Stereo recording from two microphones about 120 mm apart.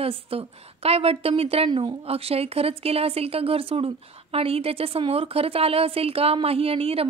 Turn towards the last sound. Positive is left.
turn(degrees=-55)  # may be behind; listen again after turning